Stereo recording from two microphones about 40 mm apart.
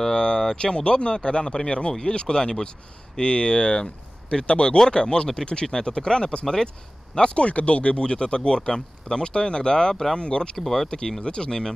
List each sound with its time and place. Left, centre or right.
0.0 s speech: centre
7.2 s speech: left
10.6 s speech: centre
10.9 s speech: left